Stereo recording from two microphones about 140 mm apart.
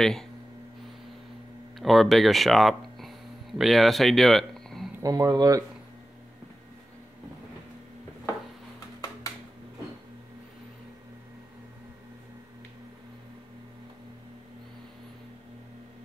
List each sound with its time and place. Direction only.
0.0 s speech: 5° left (ahead or behind)
1.8 s speech: centre (ahead or behind)
5.0 s speech: 25° right (ahead or behind)